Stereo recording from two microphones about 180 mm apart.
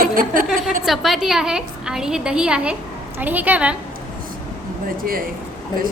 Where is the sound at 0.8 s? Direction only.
Centre (ahead or behind).